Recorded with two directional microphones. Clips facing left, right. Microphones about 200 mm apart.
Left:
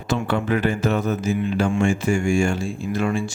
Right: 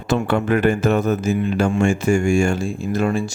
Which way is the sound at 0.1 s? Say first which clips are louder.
Right 3 dB; 50° right (ahead or behind).